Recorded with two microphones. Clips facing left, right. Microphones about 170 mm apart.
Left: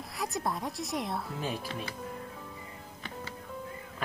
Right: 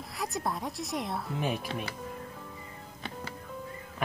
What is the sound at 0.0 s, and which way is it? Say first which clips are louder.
Speech: even; centre (ahead or behind).